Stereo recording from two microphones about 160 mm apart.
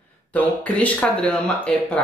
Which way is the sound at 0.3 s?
10° left (ahead or behind).